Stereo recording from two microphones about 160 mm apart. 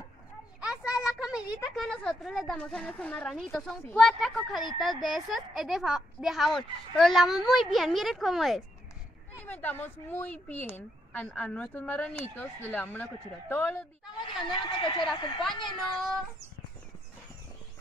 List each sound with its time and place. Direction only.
0.6 s a sound: 5° right (ahead or behind)
1.0 s a woman's voice: 5° right (ahead or behind)
9.5 s speech: 10° left (ahead or behind)
14.5 s speech: 30° left (ahead or behind)
15.6 s a woman's voice: centre (ahead or behind)